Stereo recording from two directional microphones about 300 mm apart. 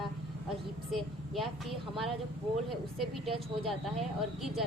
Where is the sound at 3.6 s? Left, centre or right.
Centre.